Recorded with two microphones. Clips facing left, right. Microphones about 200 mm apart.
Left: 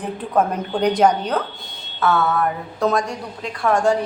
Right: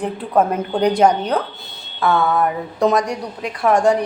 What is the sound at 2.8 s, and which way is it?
A woman's voice, 15° right (ahead or behind).